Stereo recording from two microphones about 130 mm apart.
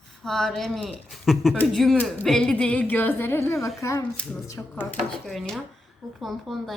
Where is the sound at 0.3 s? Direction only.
5° left (ahead or behind).